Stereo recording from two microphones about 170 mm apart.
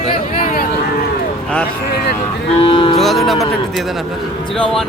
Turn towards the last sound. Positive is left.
turn(degrees=5)  # may be behind; listen again after turning